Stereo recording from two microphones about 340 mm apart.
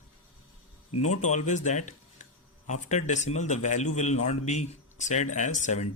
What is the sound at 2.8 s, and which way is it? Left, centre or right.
Speech, left.